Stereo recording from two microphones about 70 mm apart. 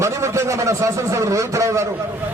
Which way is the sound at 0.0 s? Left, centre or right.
Right.